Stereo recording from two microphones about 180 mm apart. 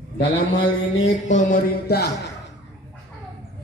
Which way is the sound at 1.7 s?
60° left (ahead or behind).